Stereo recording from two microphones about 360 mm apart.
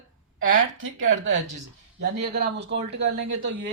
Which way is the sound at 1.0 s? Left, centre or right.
Right.